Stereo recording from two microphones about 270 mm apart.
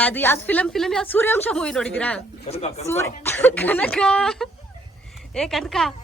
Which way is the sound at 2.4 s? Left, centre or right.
Left.